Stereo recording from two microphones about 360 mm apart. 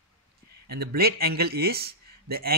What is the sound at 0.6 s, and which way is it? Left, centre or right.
Speech, right.